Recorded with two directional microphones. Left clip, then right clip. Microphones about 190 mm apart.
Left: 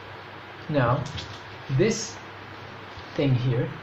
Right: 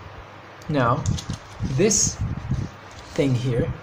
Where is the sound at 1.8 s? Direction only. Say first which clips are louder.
Right 4 dB; 45° right (ahead or behind).